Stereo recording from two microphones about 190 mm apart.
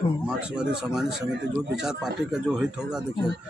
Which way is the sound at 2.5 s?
5° right (ahead or behind).